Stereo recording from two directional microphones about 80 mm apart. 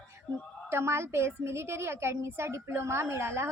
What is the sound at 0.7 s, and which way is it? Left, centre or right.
A woman's voice, right.